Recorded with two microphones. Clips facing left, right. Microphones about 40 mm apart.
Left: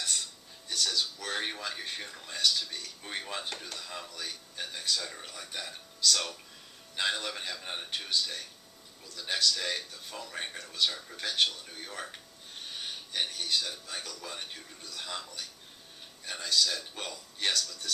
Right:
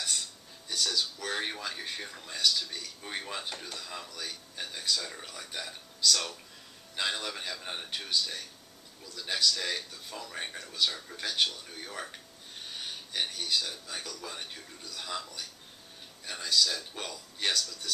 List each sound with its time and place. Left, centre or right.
0.7 s speech: centre